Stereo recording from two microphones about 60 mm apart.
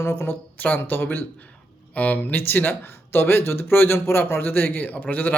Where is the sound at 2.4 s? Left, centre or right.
Left.